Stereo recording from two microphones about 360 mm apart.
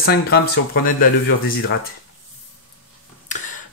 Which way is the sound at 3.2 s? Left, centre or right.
Left.